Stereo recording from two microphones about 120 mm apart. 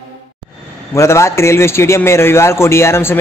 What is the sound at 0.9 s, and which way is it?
A man's voice, 25° left (ahead or behind).